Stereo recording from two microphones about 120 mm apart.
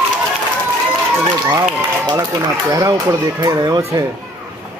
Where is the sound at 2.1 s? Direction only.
30° right (ahead or behind).